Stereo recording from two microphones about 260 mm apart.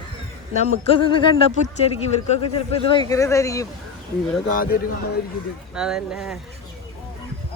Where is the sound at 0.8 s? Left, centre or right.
Left.